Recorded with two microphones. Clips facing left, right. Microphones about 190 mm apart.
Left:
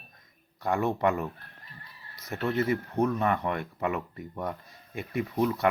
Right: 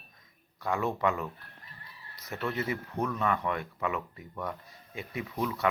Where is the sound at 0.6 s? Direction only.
50° left (ahead or behind).